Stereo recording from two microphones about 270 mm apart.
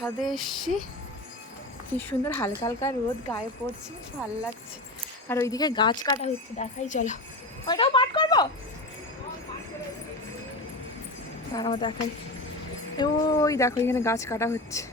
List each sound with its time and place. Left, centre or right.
0.0 s speech: centre
1.9 s speech: centre
5.3 s speech: centre; by 7.2 s left
7.7 s a sound: centre
11.5 s speech: centre
13.0 s speech: centre